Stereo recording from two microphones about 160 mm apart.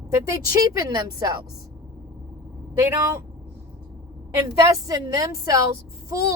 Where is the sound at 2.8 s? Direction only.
15° right (ahead or behind).